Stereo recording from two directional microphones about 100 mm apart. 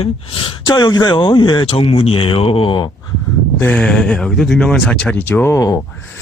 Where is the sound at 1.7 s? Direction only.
70° left (ahead or behind).